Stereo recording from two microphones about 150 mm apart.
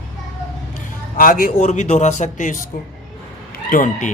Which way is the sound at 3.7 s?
60° left (ahead or behind).